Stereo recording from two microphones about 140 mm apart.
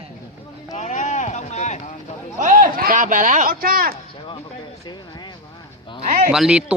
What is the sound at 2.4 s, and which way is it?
Speech, 70° right (ahead or behind).